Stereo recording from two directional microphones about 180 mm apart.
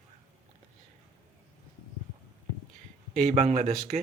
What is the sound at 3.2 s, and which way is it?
Speech, 40° right (ahead or behind).